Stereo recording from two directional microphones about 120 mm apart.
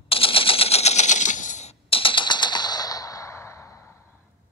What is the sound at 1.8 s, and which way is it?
Machine gun, 50° left (ahead or behind).